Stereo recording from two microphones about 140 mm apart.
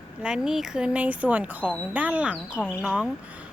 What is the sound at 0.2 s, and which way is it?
Speech, 5° right (ahead or behind).